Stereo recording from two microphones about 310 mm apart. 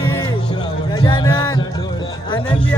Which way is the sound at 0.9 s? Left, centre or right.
Centre.